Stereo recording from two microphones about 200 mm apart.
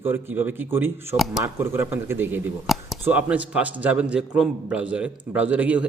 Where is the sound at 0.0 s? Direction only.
10° right (ahead or behind).